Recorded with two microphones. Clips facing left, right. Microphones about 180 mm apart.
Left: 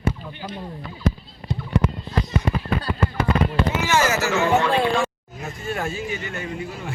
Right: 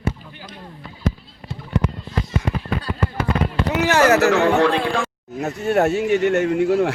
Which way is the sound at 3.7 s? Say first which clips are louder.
Right 8 dB; 65° right (ahead or behind).